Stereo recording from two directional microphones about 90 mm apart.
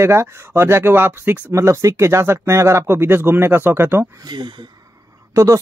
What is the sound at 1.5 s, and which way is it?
Speech, 35° right (ahead or behind).